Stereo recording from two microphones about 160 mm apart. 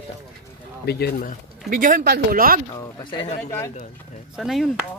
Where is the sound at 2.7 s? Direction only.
25° left (ahead or behind).